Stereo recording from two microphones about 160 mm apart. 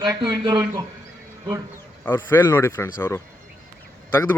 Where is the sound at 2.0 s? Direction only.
15° left (ahead or behind).